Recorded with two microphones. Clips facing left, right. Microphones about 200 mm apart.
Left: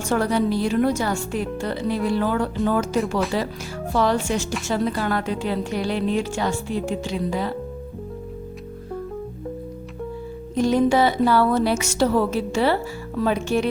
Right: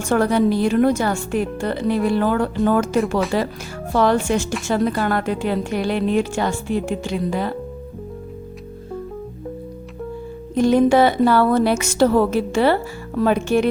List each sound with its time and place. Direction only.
0.1 s a woman's voice: 55° right (ahead or behind)
10.5 s a woman's voice: 55° right (ahead or behind)